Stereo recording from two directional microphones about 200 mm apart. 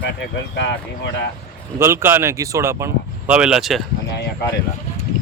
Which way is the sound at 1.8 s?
10° right (ahead or behind).